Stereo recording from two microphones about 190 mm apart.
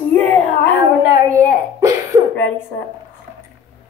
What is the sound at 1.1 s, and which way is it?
A child's voice, 15° right (ahead or behind).